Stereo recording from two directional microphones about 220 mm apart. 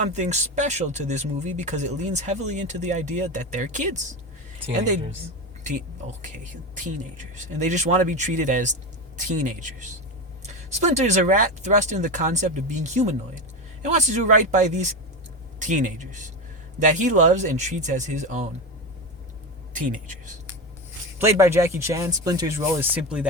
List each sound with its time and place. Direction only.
0.1 s speech: 30° right (ahead or behind)
6.2 s speech: 35° right (ahead or behind)
19.7 s speech: 35° right (ahead or behind)
21.2 s speech: 15° right (ahead or behind)